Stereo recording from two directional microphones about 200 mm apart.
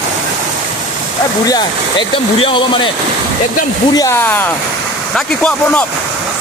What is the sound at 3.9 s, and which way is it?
Speech, 15° left (ahead or behind).